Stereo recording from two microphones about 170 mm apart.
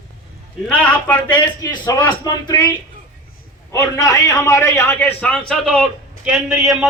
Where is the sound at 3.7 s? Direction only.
20° left (ahead or behind).